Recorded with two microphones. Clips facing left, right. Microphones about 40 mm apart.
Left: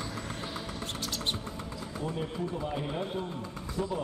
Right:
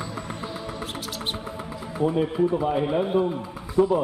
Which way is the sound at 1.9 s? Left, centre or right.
Right.